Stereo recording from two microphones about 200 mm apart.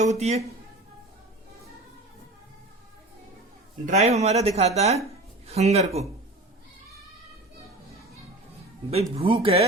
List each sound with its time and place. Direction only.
0.0 s speech: 35° right (ahead or behind)
3.8 s speech: 35° right (ahead or behind)
9.1 s speech: 30° right (ahead or behind)